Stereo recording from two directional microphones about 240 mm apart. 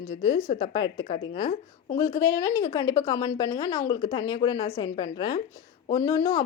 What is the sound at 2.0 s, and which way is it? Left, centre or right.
A woman's voice, centre.